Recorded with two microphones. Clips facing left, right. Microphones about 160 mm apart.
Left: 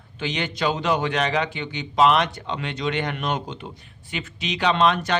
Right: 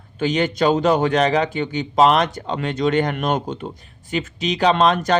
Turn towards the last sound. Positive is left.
turn(degrees=-40)  # may be behind; listen again after turning